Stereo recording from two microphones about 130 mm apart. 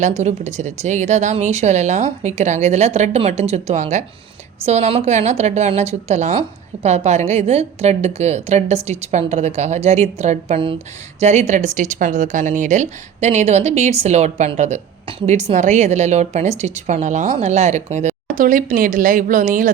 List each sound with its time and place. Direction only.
0.0 s a woman's voice: 60° right (ahead or behind); by 19.7 s 85° right